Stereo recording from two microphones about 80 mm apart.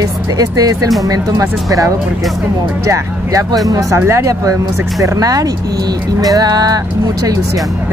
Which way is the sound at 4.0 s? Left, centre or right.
Right.